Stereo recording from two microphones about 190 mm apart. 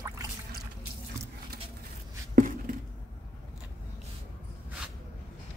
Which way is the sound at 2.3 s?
45° right (ahead or behind).